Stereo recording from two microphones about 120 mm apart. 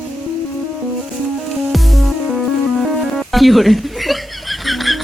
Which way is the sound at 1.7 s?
Centre (ahead or behind).